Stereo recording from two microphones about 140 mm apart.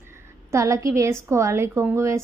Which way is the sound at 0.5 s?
20° right (ahead or behind).